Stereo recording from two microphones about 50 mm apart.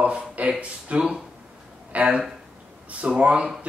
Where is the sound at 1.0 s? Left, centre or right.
Centre.